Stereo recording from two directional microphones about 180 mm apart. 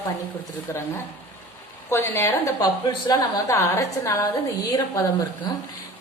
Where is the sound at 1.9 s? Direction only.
15° left (ahead or behind).